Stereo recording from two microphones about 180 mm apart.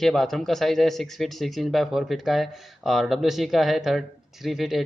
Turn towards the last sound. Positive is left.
turn(degrees=0)  # may be behind; listen again after turning